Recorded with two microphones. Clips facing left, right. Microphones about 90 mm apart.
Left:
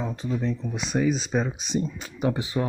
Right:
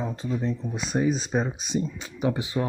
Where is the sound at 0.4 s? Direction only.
25° right (ahead or behind).